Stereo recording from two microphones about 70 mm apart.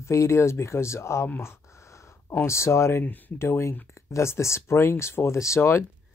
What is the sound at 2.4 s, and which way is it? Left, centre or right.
Speech, left.